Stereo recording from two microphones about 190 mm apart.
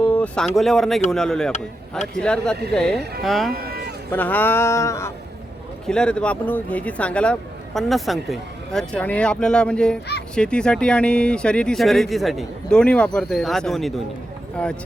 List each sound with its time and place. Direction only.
0.0 s speech: 5° left (ahead or behind)
3.0 s speech: 55° right (ahead or behind)
3.2 s speech: centre (ahead or behind)
3.5 s a sound: 55° right (ahead or behind)
4.1 s speech: 10° left (ahead or behind)
5.8 s speech: 5° left (ahead or behind)